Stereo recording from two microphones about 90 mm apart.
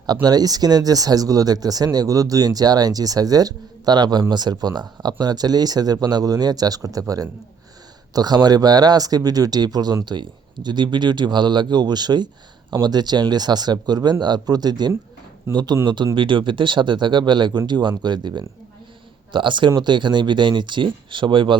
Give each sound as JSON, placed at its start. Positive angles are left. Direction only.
{"t": 0.0, "sound": "speech", "side_deg": -45}
{"t": 8.1, "sound": "speech", "side_deg": -50}
{"t": 16.1, "sound": "speech", "side_deg": -65}